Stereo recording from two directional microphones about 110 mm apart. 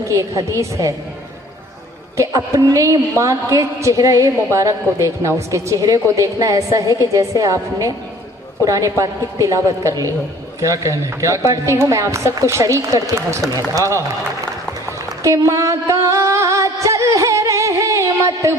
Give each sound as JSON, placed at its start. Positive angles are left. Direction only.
{"t": 0.1, "sound": "a woman's voice", "side_deg": -30}
{"t": 2.1, "sound": "a woman's voice", "side_deg": -30}
{"t": 14.9, "sound": "a sound", "side_deg": -25}